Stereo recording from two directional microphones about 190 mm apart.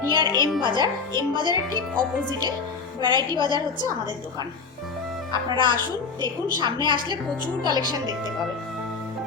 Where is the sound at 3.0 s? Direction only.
25° right (ahead or behind).